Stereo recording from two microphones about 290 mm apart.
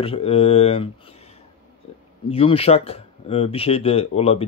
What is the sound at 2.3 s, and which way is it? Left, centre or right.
Speech, centre.